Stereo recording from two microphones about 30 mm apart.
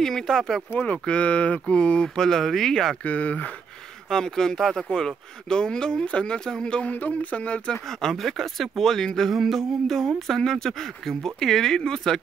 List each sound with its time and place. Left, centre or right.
0.0 s speech: centre
1.0 s speech: left
2.0 s speech: left
3.1 s speech: left
4.1 s speech: centre
6.9 s speech: left
8.0 s speech: centre
9.3 s a sound: centre
9.8 s speech: centre